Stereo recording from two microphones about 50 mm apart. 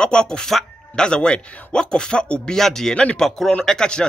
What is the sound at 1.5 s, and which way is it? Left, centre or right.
Speech, left.